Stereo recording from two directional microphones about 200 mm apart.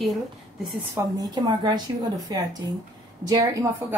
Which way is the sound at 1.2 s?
20° right (ahead or behind).